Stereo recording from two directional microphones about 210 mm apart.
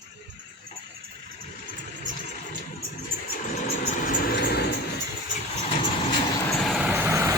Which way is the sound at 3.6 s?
40° left (ahead or behind).